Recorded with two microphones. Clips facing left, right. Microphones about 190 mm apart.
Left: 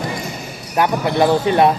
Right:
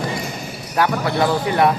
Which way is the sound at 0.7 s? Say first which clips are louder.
Left 2 dB; 20° left (ahead or behind).